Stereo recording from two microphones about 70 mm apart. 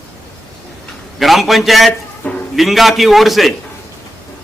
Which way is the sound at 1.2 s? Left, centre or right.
Centre.